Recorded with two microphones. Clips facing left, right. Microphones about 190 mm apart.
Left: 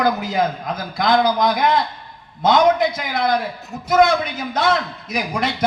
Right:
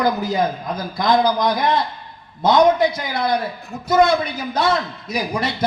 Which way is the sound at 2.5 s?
90° left.